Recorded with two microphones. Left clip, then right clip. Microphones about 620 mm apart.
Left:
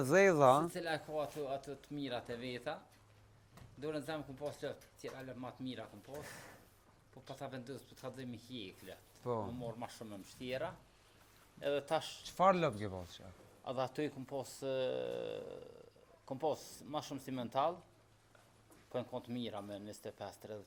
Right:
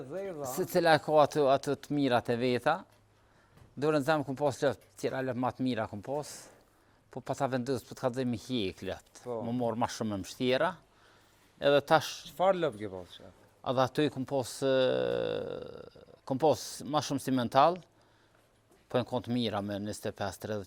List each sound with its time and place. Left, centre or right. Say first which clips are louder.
0.1 s speech: left 12 dB; left
0.7 s speech: right 15 dB; right
3.8 s speech: right 14 dB; right
7.1 s speech: right 15 dB; right
11.6 s speech: right 12 dB; right
12.4 s speech: right 3 dB; centre
13.7 s speech: right 10 dB; right
18.9 s speech: right 11 dB; right